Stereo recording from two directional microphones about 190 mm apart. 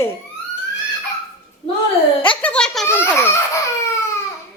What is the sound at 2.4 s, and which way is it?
A woman's voice, 5° left (ahead or behind).